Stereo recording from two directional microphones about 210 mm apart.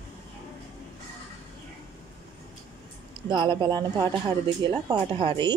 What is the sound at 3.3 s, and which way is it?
Speech, 20° right (ahead or behind).